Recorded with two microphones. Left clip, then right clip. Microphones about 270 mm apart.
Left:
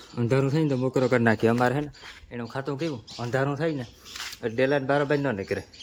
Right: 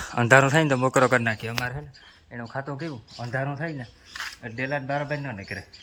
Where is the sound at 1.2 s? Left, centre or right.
Left.